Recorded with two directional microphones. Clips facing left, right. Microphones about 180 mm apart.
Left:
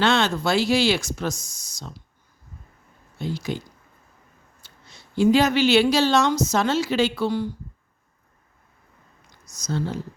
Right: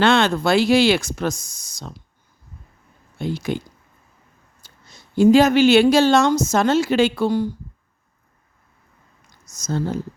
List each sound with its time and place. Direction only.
0.0 s speech: 55° right (ahead or behind)
3.2 s speech: 55° right (ahead or behind)
4.6 s speech: 45° right (ahead or behind)
9.6 s speech: 45° right (ahead or behind)